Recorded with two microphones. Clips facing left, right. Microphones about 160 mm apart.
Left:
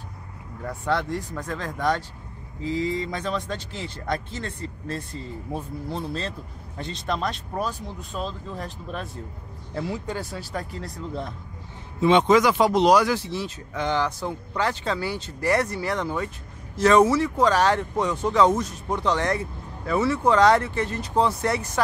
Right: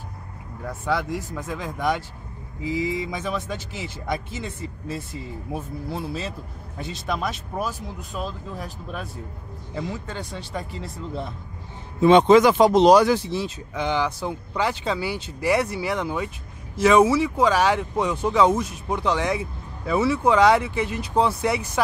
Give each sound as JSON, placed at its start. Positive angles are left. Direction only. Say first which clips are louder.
{"t": 0.7, "sound": "speech", "louder": "even", "side_deg": -5}
{"t": 9.8, "sound": "speech", "louder": "left 2 dB", "side_deg": 10}
{"t": 10.3, "sound": "speech", "louder": "even", "side_deg": 0}
{"t": 12.0, "sound": "a man's voice", "louder": "right 4 dB", "side_deg": -40}
{"t": 12.3, "sound": "speech", "louder": "right 4 dB", "side_deg": -25}